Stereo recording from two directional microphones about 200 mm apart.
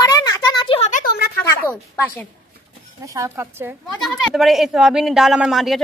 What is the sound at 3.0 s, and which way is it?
Speech, 15° right (ahead or behind).